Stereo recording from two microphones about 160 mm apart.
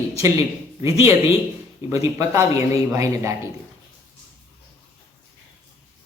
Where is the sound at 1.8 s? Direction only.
20° right (ahead or behind).